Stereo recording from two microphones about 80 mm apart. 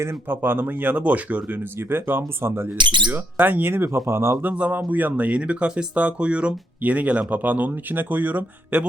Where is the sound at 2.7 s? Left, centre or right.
Right.